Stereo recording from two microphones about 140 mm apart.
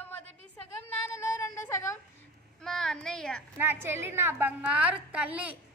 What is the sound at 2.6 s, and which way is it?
Speech, 5° left (ahead or behind).